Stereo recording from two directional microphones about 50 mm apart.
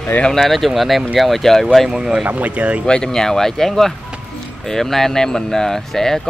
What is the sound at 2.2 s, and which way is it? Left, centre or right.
Speech, right.